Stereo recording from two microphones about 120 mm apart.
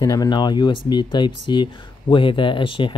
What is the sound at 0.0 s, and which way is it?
Speech, 30° left (ahead or behind).